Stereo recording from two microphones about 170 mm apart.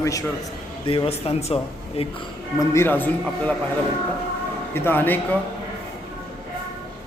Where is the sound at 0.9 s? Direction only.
35° left (ahead or behind).